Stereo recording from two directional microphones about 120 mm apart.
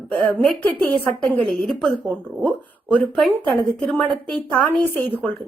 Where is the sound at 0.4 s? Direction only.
10° left (ahead or behind).